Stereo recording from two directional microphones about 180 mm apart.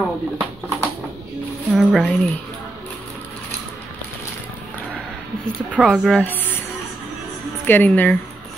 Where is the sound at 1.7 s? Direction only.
Centre (ahead or behind).